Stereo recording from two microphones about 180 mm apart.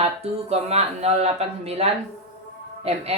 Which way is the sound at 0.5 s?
35° right (ahead or behind).